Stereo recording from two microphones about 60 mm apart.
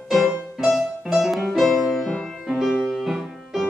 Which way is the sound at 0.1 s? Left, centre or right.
Centre.